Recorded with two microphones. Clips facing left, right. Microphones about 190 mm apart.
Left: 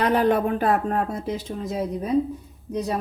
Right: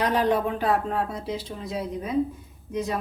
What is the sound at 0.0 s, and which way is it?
A woman's voice, 55° left (ahead or behind).